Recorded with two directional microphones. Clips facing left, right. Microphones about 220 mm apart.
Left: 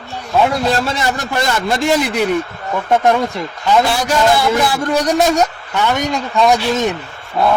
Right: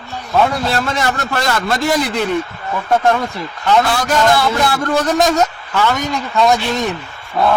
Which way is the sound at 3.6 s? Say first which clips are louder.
Even; 10° left (ahead or behind).